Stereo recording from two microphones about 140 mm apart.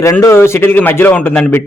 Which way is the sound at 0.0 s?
20° left (ahead or behind).